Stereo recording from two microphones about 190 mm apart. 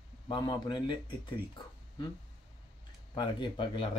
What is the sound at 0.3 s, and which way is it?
Speech, 25° left (ahead or behind).